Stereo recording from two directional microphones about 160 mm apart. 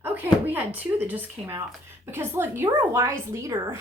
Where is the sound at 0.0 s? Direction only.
10° right (ahead or behind).